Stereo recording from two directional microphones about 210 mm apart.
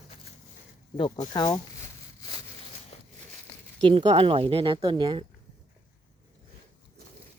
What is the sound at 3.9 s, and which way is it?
Speech, 25° right (ahead or behind).